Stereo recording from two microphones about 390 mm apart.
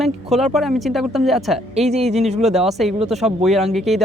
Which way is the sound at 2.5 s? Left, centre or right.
Centre.